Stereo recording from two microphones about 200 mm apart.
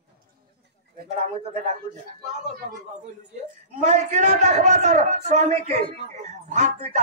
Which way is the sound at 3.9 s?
35° right (ahead or behind).